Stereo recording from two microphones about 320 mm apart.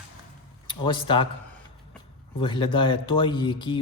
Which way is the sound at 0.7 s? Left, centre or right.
Centre.